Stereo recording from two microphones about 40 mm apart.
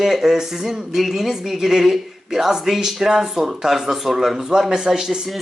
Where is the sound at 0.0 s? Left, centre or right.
Centre.